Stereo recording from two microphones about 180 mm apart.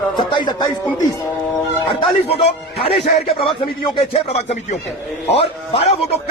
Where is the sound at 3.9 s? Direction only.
35° left (ahead or behind).